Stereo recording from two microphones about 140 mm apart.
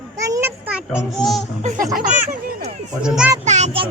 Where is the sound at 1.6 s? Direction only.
60° right (ahead or behind).